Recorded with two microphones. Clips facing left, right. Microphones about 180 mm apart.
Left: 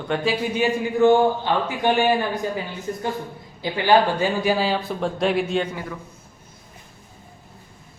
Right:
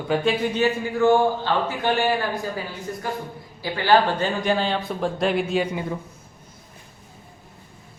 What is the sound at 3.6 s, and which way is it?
Speech, 15° left (ahead or behind).